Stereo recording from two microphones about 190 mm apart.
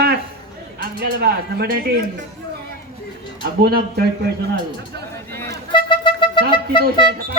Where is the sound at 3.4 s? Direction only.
55° right (ahead or behind).